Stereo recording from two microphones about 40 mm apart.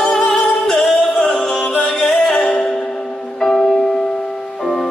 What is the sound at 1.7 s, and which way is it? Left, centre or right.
Music, left.